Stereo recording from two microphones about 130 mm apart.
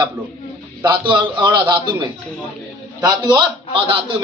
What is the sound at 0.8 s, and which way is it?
A man's voice, 35° right (ahead or behind).